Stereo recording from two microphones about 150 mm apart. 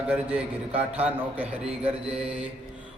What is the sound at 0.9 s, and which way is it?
Mantra, 10° right (ahead or behind).